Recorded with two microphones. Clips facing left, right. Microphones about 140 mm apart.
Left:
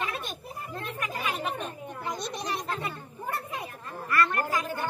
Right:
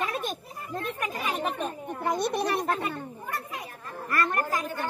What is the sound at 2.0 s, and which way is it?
A child's voice, 55° right (ahead or behind).